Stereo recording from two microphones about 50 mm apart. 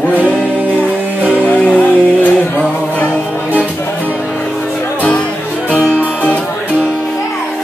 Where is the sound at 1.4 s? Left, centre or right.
Left.